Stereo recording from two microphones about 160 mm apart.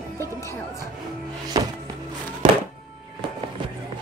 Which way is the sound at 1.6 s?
25° right (ahead or behind).